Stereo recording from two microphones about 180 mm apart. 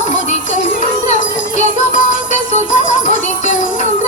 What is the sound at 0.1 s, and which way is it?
Music, 45° left (ahead or behind).